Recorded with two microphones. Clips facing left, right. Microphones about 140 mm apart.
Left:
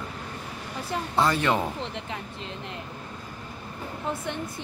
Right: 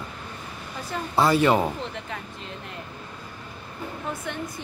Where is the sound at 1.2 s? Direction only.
10° right (ahead or behind).